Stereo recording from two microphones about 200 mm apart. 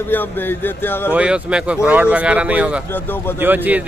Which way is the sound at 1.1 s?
5° right (ahead or behind).